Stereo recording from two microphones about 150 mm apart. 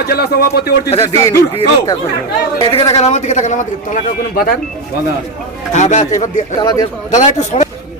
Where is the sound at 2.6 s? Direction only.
40° left (ahead or behind).